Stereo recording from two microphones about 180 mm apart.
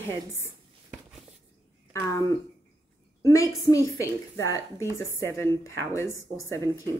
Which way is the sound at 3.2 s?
20° left (ahead or behind).